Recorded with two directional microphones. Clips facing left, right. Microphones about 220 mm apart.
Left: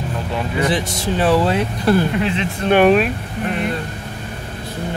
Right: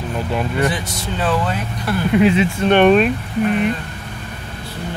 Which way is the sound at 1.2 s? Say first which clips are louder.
Left 4 dB; 30° left (ahead or behind).